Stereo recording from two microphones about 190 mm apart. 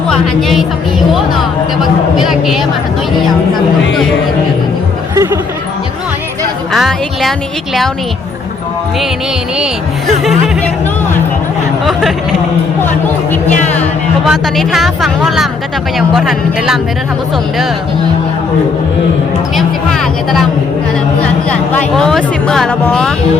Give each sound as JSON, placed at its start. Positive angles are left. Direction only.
{"t": 0.1, "sound": "speech", "side_deg": 0}
{"t": 5.1, "sound": "speech", "side_deg": -15}
{"t": 6.7, "sound": "speech", "side_deg": 0}
{"t": 14.3, "sound": "speech", "side_deg": 0}
{"t": 19.5, "sound": "speech", "side_deg": 0}
{"t": 21.5, "sound": "speech", "side_deg": 5}